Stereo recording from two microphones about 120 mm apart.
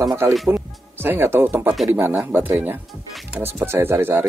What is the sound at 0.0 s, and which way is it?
Speech, 25° right (ahead or behind).